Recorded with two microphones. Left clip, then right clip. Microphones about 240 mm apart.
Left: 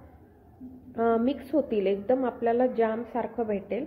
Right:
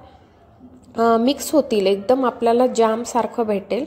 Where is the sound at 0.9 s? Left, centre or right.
Right.